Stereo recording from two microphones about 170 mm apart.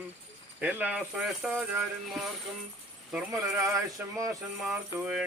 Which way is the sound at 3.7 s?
20° right (ahead or behind).